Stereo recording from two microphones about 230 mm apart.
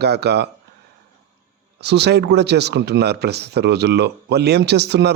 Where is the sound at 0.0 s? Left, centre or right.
Right.